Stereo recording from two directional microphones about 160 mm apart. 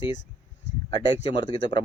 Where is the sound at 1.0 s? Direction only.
30° left (ahead or behind).